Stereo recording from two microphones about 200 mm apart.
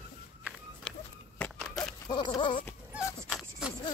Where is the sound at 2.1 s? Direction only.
25° left (ahead or behind).